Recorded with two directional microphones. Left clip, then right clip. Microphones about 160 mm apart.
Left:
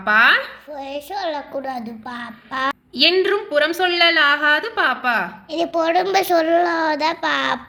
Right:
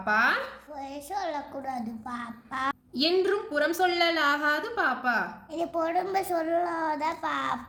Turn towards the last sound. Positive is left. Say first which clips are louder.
# left 10 dB
turn(degrees=50)  # may be behind; listen again after turning